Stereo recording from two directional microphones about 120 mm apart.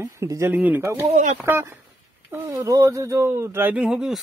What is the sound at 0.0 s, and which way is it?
Speech, 20° right (ahead or behind).